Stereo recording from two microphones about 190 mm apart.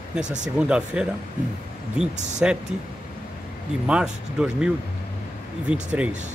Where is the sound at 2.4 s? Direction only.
5° right (ahead or behind).